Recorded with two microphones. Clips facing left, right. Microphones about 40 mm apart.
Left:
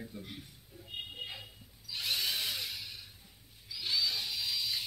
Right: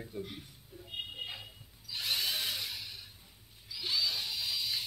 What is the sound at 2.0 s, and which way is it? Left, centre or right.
Tools, centre.